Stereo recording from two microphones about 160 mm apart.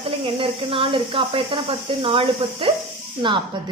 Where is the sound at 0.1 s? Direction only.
35° right (ahead or behind).